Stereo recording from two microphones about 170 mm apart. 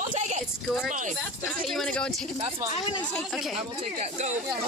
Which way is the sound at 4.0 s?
45° right (ahead or behind).